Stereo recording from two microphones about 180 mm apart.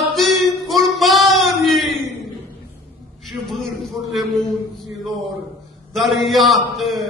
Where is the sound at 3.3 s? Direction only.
Centre (ahead or behind).